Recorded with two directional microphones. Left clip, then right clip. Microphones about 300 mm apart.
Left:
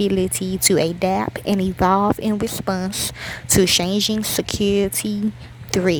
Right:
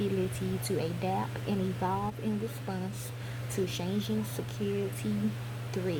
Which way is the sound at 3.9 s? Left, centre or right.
Left.